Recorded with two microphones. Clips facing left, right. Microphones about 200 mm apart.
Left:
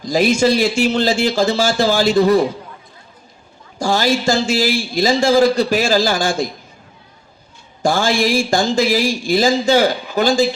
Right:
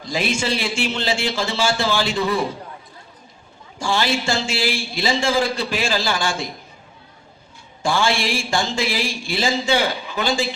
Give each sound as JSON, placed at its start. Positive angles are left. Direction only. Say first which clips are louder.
{"t": 0.0, "sound": "a man's voice", "louder": "left 9 dB", "side_deg": 40}
{"t": 3.8, "sound": "a man's voice", "louder": "left 5 dB", "side_deg": 40}
{"t": 7.8, "sound": "a man's voice", "louder": "left 4 dB", "side_deg": 40}